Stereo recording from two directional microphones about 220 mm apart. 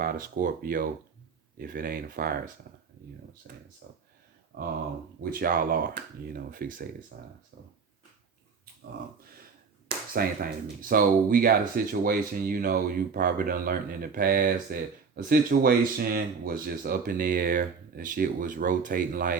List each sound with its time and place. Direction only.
0.0 s speech: 40° right (ahead or behind)
4.5 s speech: 40° right (ahead or behind)
10.1 s speech: 40° right (ahead or behind)